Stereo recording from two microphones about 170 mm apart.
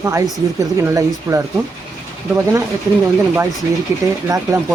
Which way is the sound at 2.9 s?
20° right (ahead or behind).